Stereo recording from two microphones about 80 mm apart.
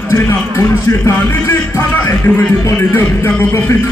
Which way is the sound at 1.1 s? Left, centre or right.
Left.